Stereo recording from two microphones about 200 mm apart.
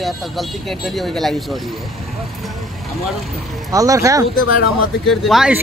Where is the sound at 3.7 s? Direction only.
15° right (ahead or behind).